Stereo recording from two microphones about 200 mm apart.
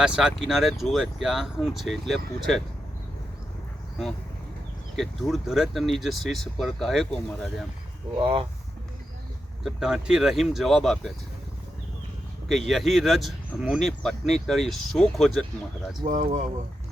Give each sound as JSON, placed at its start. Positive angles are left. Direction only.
{"t": 0.0, "sound": "speech", "side_deg": -5}
{"t": 4.9, "sound": "speech", "side_deg": 0}
{"t": 8.2, "sound": "speech", "side_deg": -25}
{"t": 9.6, "sound": "speech", "side_deg": -5}
{"t": 12.5, "sound": "speech", "side_deg": 0}
{"t": 16.0, "sound": "speech", "side_deg": -40}